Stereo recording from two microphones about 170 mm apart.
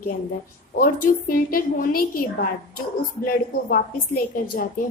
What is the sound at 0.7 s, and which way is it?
A woman's voice, 55° left (ahead or behind).